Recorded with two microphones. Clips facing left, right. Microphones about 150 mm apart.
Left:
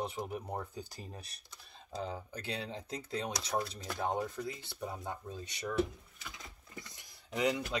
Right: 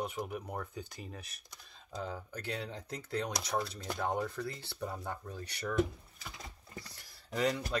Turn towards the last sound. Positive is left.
turn(degrees=15)  # may be behind; listen again after turning